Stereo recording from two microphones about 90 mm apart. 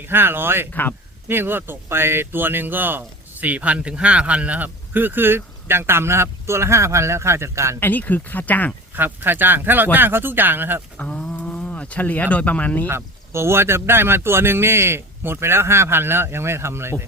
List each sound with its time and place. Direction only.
0.0 s speech: 25° right (ahead or behind)
0.7 s speech: 20° left (ahead or behind)
1.3 s speech: 25° right (ahead or behind)
7.8 s speech: 20° left (ahead or behind)
9.0 s speech: 20° right (ahead or behind)
10.9 s speech: 15° left (ahead or behind)
12.9 s speech: 30° right (ahead or behind)